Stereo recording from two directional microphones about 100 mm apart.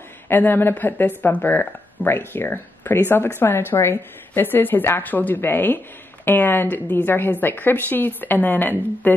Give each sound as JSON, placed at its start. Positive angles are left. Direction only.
{"t": 0.3, "sound": "speech", "side_deg": 20}